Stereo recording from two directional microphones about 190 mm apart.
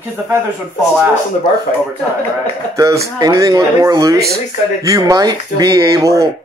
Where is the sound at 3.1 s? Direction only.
20° right (ahead or behind).